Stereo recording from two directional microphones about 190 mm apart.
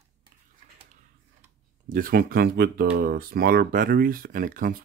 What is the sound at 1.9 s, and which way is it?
Speech, 50° right (ahead or behind).